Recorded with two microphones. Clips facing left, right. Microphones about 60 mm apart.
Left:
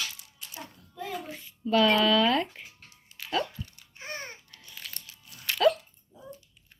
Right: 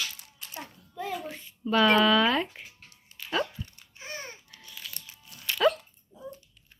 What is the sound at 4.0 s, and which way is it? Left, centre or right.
Babbling, left.